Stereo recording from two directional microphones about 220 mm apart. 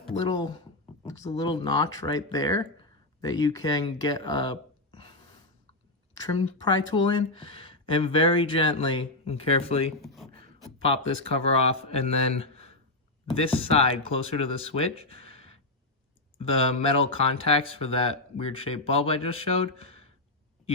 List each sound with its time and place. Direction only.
0.3 s speech: 20° left (ahead or behind)
6.2 s speech: 20° left (ahead or behind)
10.0 s a sound: centre (ahead or behind)
11.3 s speech: 25° left (ahead or behind)